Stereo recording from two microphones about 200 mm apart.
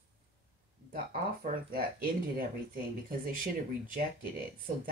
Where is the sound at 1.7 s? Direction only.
45° right (ahead or behind).